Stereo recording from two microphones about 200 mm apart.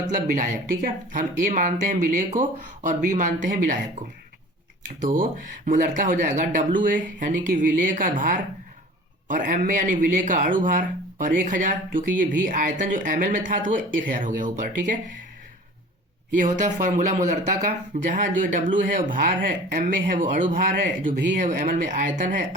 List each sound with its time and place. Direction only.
0.3 s speech: 40° right (ahead or behind)
4.9 s a woman's voice: 45° right (ahead or behind)
16.4 s speech: 40° right (ahead or behind)